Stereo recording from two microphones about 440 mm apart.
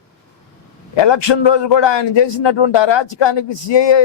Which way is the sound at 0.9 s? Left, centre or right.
Left.